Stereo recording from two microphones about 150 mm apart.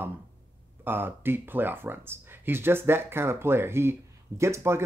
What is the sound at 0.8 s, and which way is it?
Speech, 15° right (ahead or behind).